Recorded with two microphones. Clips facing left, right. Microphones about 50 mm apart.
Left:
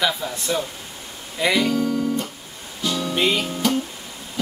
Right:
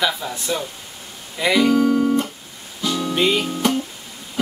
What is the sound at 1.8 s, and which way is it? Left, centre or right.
Guitar, centre.